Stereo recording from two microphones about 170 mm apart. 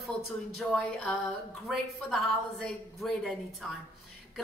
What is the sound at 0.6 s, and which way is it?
A woman's voice, centre (ahead or behind).